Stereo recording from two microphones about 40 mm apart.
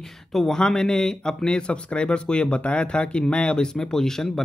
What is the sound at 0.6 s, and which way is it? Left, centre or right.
Speech, centre.